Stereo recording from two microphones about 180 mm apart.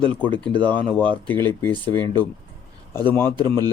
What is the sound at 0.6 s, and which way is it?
Speech, 10° left (ahead or behind).